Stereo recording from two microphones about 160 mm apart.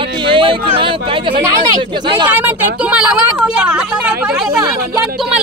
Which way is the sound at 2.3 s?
10° right (ahead or behind).